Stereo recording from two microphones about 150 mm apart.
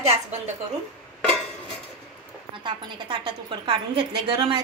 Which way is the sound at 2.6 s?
35° right (ahead or behind).